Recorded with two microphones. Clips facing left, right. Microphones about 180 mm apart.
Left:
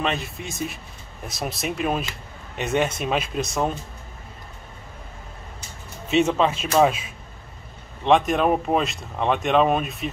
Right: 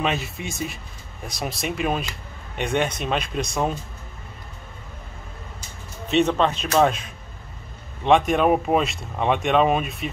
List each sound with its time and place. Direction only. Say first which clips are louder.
0.0 s speech: right 1 dB; centre (ahead or behind)
6.0 s speech: even; 5° left (ahead or behind)